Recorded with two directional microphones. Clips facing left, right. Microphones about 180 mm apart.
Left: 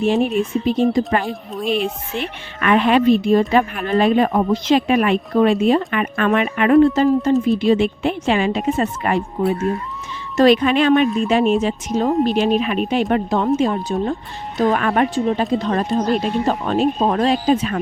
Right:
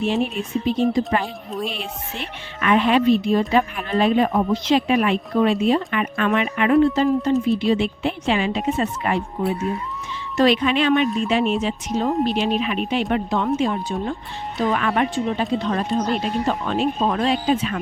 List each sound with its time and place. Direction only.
0.0 s speech: 45° left (ahead or behind)
1.2 s speech: centre (ahead or behind)
2.1 s speech: 60° left (ahead or behind)
10.3 s speech: 45° left (ahead or behind)